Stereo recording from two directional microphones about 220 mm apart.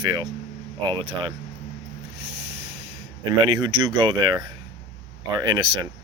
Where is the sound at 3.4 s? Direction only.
20° right (ahead or behind).